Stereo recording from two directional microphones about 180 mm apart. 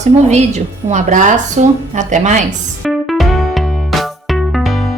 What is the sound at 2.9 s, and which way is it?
Music, centre (ahead or behind).